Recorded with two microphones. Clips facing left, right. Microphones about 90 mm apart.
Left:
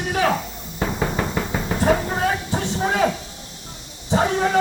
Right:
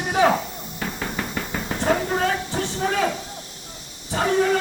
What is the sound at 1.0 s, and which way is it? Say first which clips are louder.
Knock: left 5 dB; 15° left (ahead or behind).